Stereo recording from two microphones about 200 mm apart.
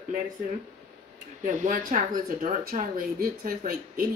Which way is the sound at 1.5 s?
40° right (ahead or behind).